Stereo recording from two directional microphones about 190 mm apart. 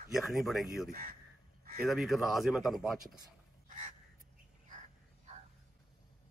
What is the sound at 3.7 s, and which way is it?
Crow, 40° right (ahead or behind).